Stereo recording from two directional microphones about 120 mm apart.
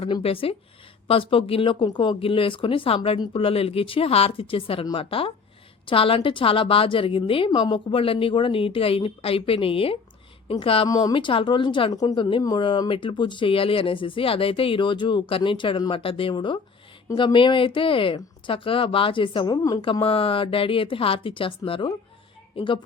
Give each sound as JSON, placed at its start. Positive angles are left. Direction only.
{"t": 0.0, "sound": "a woman's voice", "side_deg": 55}
{"t": 10.8, "sound": "speech", "side_deg": 30}
{"t": 11.1, "sound": "a woman's voice", "side_deg": 45}
{"t": 12.4, "sound": "speech", "side_deg": 30}
{"t": 12.9, "sound": "a woman's voice", "side_deg": 45}